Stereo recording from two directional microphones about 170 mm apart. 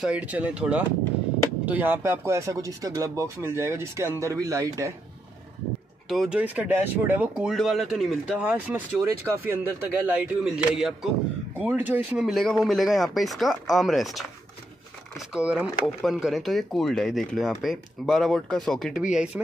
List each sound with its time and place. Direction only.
0.0 s speech: 5° right (ahead or behind)
6.0 s speech: centre (ahead or behind)
15.3 s speech: 5° right (ahead or behind)